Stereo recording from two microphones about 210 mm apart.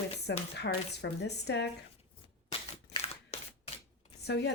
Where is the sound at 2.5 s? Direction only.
25° left (ahead or behind).